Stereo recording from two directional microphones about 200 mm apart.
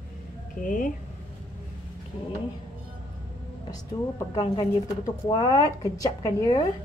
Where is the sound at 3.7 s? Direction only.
20° left (ahead or behind).